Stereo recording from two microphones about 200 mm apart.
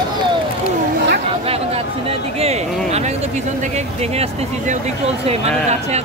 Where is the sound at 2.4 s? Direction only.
35° right (ahead or behind).